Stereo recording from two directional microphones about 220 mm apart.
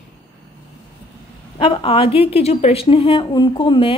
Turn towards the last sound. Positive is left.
turn(degrees=20)  # may be behind; listen again after turning